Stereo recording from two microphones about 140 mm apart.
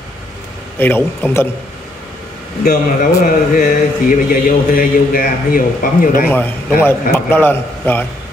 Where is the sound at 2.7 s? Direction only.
75° left (ahead or behind).